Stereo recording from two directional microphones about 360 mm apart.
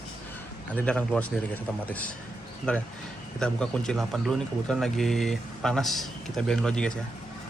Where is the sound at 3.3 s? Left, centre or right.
Centre.